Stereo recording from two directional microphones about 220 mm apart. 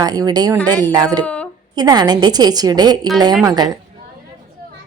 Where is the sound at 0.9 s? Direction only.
15° right (ahead or behind).